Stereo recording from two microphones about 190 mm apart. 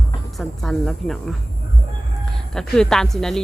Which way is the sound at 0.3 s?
Centre (ahead or behind).